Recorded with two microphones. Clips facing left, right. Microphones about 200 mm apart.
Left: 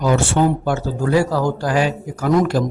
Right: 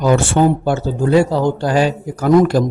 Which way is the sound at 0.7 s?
25° right (ahead or behind).